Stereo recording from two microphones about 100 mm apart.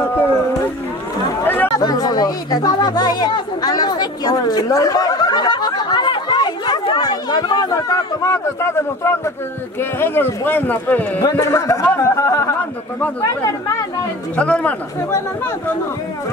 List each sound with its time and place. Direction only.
1.4 s chatter: 20° left (ahead or behind)
1.8 s speech: 40° left (ahead or behind)
11.9 s a sound: 30° left (ahead or behind)
14.3 s speech: 15° left (ahead or behind)
15.0 s speech: 25° left (ahead or behind)